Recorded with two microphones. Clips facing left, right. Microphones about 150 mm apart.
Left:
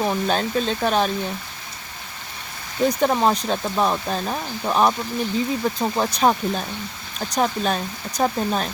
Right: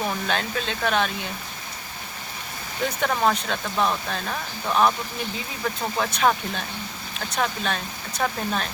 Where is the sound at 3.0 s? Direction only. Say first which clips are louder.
Left 1 dB; 25° left (ahead or behind).